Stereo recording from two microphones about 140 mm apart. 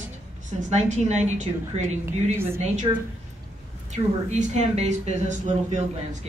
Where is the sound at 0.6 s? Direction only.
55° right (ahead or behind).